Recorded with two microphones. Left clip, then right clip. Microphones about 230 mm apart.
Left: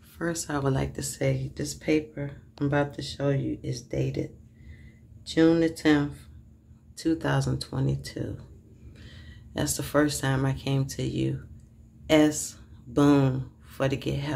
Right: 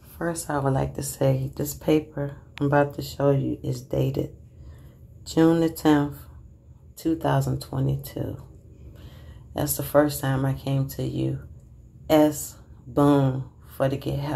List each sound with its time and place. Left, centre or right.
0.2 s speech: centre
5.3 s speech: centre
7.0 s speech: centre
9.5 s speech: centre